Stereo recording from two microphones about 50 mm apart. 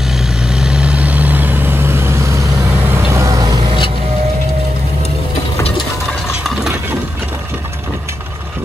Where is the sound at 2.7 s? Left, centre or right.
Right.